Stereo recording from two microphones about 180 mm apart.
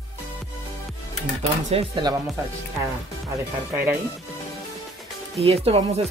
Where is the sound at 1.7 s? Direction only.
30° right (ahead or behind).